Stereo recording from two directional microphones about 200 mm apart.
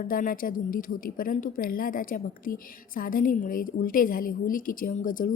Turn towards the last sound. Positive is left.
turn(degrees=45)  # may be behind; listen again after turning